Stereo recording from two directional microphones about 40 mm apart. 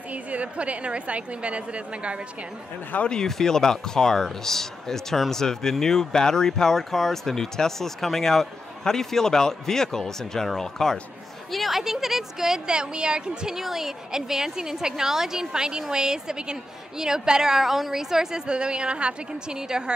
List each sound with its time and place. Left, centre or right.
0.1 s a woman's voice: right
3.2 s a woman's voice: centre; by 13.6 s right
13.6 s a woman's voice: centre